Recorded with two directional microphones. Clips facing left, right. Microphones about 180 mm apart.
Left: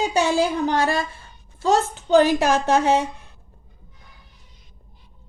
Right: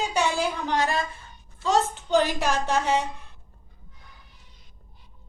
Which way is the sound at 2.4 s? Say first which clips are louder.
Left 6 dB; 85° left.